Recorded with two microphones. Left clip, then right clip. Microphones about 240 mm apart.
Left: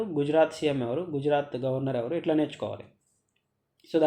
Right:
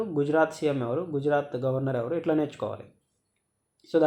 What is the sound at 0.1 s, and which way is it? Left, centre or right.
Speech, centre.